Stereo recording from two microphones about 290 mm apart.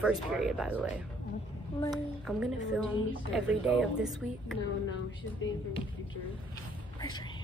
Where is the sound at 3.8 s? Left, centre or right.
Centre.